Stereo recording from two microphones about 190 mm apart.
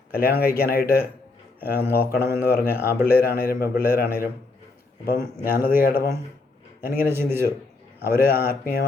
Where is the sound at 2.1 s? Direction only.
55° left (ahead or behind).